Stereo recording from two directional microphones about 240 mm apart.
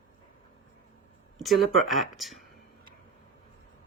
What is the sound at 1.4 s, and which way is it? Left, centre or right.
Speech, centre.